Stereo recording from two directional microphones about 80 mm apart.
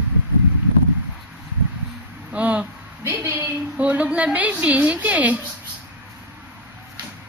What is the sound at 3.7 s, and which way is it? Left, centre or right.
A woman's voice, centre.